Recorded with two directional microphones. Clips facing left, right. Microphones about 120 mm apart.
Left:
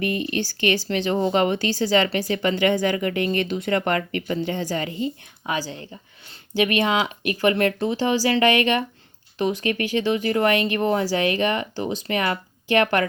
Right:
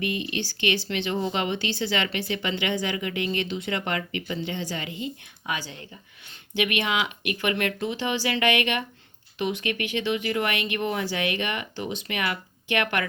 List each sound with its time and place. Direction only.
0.0 s speech: 45° left (ahead or behind)